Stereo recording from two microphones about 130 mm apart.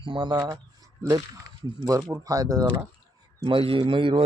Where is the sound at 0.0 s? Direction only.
40° right (ahead or behind).